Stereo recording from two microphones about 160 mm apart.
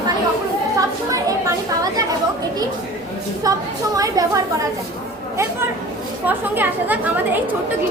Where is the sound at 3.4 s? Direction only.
25° right (ahead or behind).